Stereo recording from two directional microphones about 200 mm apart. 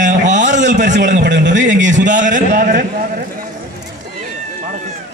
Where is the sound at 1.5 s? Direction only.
40° right (ahead or behind).